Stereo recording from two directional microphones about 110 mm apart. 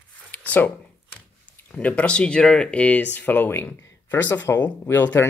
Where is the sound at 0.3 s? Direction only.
15° left (ahead or behind).